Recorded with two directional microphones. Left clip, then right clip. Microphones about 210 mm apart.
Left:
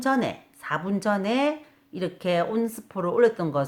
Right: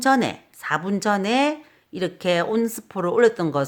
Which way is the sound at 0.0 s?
45° right (ahead or behind).